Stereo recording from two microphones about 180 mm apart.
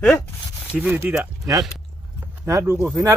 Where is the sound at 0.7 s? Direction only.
10° right (ahead or behind).